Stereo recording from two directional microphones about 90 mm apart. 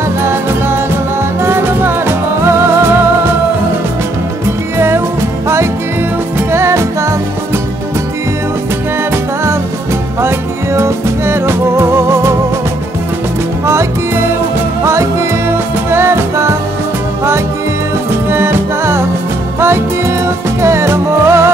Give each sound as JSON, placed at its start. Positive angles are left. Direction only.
{"t": 1.4, "sound": "music", "side_deg": -25}
{"t": 4.7, "sound": "music", "side_deg": -25}
{"t": 6.5, "sound": "music", "side_deg": -30}
{"t": 10.2, "sound": "music", "side_deg": -30}
{"t": 15.9, "sound": "music", "side_deg": -25}
{"t": 18.3, "sound": "music", "side_deg": -25}
{"t": 20.6, "sound": "music", "side_deg": -30}